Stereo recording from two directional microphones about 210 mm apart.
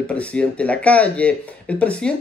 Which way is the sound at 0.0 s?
5° left (ahead or behind).